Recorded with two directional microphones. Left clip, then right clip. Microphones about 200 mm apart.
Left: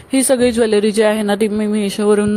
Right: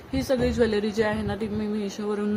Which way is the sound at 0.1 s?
40° left (ahead or behind).